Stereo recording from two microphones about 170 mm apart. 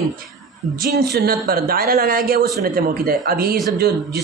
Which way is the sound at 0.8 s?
70° right (ahead or behind).